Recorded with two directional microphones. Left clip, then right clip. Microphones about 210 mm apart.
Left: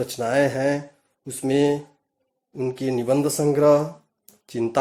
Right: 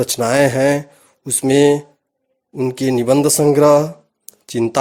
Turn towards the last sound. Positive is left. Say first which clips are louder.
# right 7 dB
turn(degrees=-45)  # may be behind; listen again after turning